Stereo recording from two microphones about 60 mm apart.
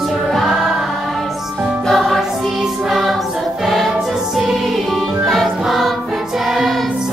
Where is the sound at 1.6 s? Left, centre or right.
Centre.